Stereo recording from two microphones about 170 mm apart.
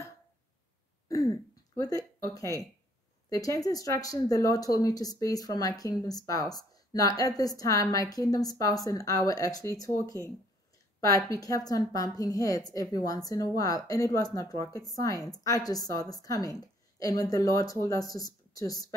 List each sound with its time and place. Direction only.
1.0 s throat clearing: 20° left (ahead or behind)
1.8 s speech: 20° left (ahead or behind)